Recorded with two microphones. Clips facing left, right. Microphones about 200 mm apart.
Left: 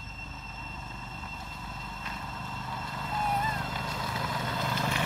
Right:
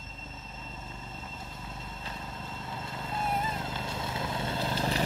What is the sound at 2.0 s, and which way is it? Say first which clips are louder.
Vehicle: left 1 dB; 25° right (ahead or behind).